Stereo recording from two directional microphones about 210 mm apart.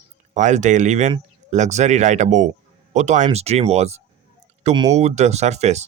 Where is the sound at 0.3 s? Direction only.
35° right (ahead or behind).